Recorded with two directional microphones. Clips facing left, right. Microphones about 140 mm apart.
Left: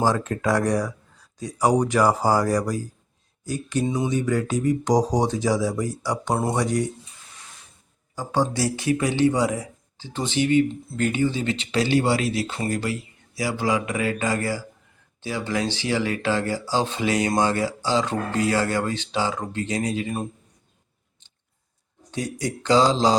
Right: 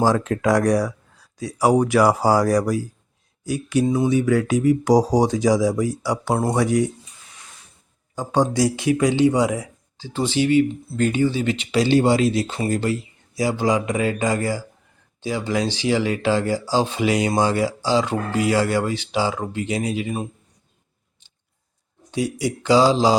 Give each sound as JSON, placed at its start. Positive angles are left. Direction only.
{"t": 0.0, "sound": "speech", "side_deg": -10}
{"t": 8.1, "sound": "speech", "side_deg": -20}
{"t": 10.2, "sound": "speech", "side_deg": 20}
{"t": 11.0, "sound": "speech", "side_deg": -25}
{"t": 11.5, "sound": "speech", "side_deg": -15}
{"t": 11.9, "sound": "speech", "side_deg": -25}
{"t": 22.1, "sound": "speech", "side_deg": -10}